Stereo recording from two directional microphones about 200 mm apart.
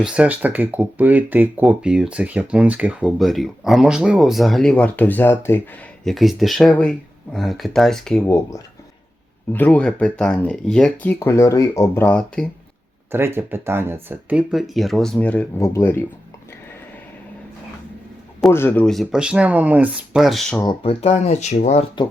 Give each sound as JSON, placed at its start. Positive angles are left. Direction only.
{"t": 0.0, "sound": "speech", "side_deg": -5}
{"t": 6.1, "sound": "speech", "side_deg": 0}
{"t": 8.2, "sound": "speech", "side_deg": 15}
{"t": 13.1, "sound": "speech", "side_deg": -10}
{"t": 18.3, "sound": "speech", "side_deg": 10}
{"t": 20.6, "sound": "speech", "side_deg": 25}